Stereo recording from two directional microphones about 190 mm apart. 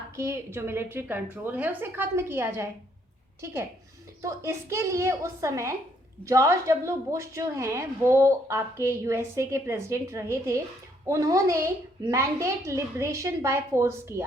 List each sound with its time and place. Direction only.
0.2 s a woman's voice: 15° right (ahead or behind)
4.2 s a woman's voice: 15° right (ahead or behind)